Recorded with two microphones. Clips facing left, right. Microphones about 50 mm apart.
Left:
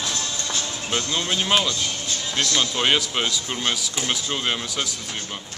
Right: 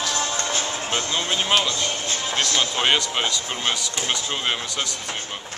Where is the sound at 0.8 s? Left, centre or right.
Right.